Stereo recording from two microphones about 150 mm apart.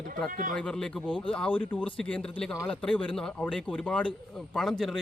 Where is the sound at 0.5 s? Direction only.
5° left (ahead or behind).